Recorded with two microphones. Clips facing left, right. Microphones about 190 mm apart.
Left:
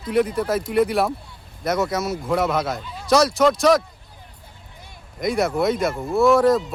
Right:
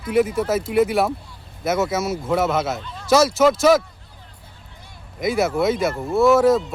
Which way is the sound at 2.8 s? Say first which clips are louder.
Even; 5° left (ahead or behind).